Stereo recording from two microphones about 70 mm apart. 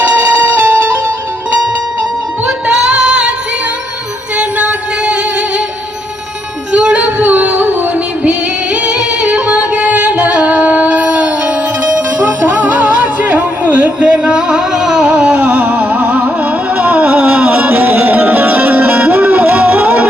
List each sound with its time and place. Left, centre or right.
0.0 s music: right
2.5 s music: centre
4.4 s music: centre
6.7 s music: centre